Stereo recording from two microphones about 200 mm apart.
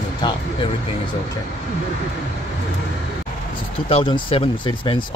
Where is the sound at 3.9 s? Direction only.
25° left (ahead or behind).